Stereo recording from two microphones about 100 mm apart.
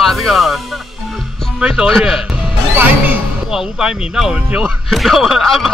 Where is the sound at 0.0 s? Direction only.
Centre (ahead or behind).